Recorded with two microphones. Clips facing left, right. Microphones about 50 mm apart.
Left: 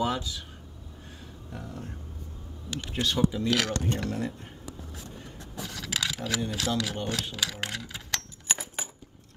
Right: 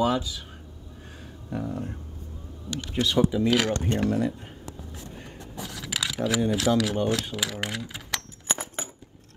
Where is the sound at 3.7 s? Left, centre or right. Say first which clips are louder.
Right 4 dB; right.